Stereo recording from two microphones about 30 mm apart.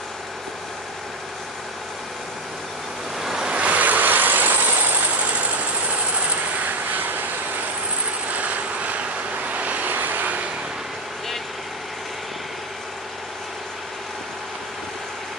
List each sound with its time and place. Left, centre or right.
3.2 s waves: centre
3.5 s vehicle: right
5.3 s vehicle: right
6.1 s vehicle: right
8.3 s vehicle: right